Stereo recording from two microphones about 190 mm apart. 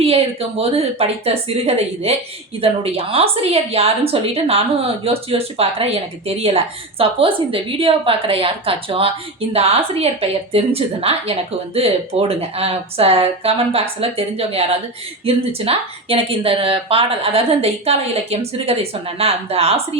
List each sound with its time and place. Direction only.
0.0 s a woman's voice: 30° right (ahead or behind)